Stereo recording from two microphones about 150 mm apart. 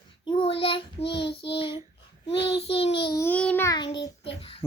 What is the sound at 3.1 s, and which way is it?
Speech, 15° left (ahead or behind).